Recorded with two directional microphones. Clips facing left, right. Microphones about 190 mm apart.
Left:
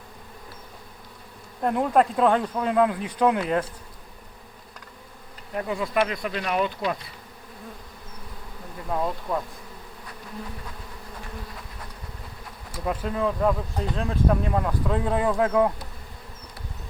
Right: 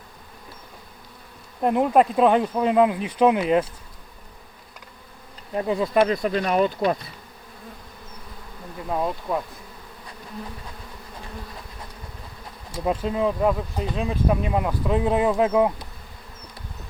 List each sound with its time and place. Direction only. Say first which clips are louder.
1.6 s speech: right 3 dB; 20° right (ahead or behind)
5.5 s speech: right 5 dB; 25° right (ahead or behind)
6.0 s speech: right 6 dB; 40° right (ahead or behind)
8.9 s speech: right 2 dB; 15° right (ahead or behind)
13.1 s speech: right 1 dB; 20° right (ahead or behind)